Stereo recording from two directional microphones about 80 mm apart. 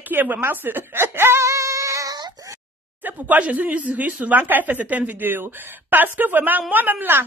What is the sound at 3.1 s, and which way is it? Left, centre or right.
A woman's voice, centre.